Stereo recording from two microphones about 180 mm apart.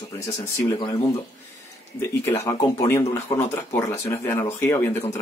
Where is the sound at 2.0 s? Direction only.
15° left (ahead or behind).